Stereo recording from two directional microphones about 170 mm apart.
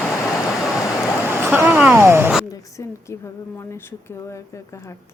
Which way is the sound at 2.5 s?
20° left (ahead or behind).